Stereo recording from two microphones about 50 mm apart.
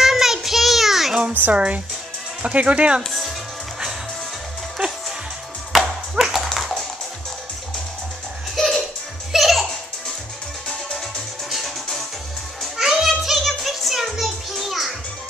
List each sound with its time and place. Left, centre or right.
0.0 s child singing: centre
1.5 s speech: right
3.0 s music: centre
5.7 s music: centre
8.5 s music: centre
11.5 s music: centre